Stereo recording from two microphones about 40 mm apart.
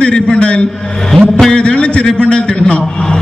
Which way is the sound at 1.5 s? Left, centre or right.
Left.